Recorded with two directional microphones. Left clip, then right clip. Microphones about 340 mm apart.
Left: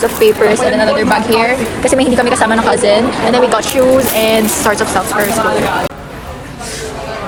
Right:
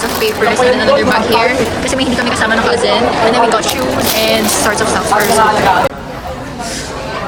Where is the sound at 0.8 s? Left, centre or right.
Centre.